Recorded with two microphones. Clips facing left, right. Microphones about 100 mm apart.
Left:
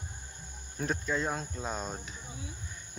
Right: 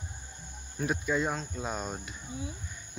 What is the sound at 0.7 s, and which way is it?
Speech, 5° right (ahead or behind).